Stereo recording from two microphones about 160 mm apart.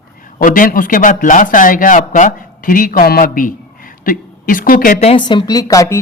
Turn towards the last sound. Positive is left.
turn(degrees=20)  # may be behind; listen again after turning